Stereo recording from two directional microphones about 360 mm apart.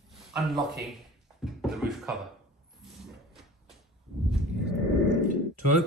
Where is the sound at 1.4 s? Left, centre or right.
Centre.